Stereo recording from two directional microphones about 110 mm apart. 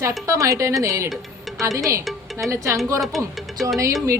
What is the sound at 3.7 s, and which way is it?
Speech, 30° right (ahead or behind).